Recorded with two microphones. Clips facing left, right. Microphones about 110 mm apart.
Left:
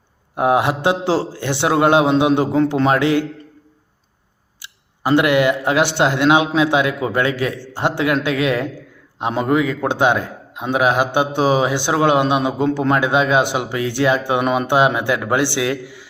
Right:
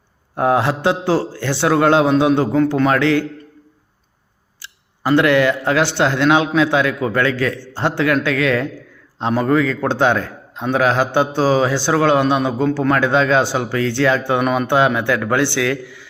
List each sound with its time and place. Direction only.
0.3 s a man's voice: 20° left (ahead or behind)
4.6 s a man's voice: 20° left (ahead or behind)